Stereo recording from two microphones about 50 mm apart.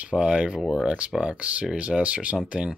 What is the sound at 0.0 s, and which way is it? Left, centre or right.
Speech, right.